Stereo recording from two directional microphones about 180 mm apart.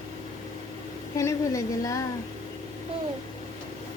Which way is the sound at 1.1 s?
15° left (ahead or behind).